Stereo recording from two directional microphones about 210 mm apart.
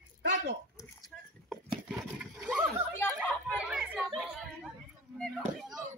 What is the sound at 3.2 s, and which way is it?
Chatter, 5° right (ahead or behind).